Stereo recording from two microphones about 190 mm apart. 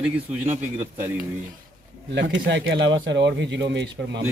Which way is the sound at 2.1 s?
70° right (ahead or behind).